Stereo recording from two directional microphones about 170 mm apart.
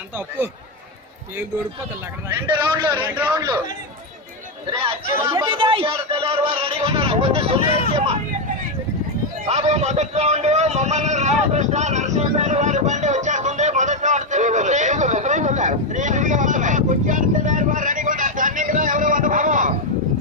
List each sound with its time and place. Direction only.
2.5 s a man's voice: 25° right (ahead or behind)
2.9 s a man's voice: 10° right (ahead or behind)
5.3 s speech: 30° right (ahead or behind)
9.5 s vehicle: 40° right (ahead or behind)